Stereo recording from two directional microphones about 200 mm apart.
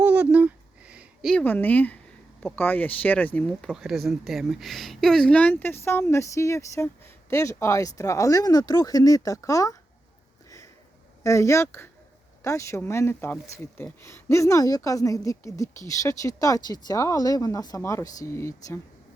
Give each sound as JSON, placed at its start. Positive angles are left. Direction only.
{"t": 0.0, "sound": "a sound", "side_deg": -5}
{"t": 2.4, "sound": "speech", "side_deg": 10}
{"t": 11.2, "sound": "speech", "side_deg": 15}